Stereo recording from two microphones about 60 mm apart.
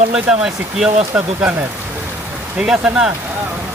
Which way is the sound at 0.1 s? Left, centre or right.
Centre.